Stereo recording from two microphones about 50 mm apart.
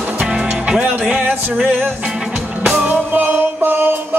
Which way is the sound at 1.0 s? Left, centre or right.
Right.